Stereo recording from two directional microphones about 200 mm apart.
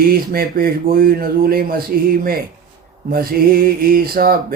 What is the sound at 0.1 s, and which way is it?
Mantra, 45° right (ahead or behind).